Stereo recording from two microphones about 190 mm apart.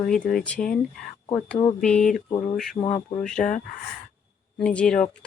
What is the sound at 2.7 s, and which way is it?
Speech, 25° left (ahead or behind).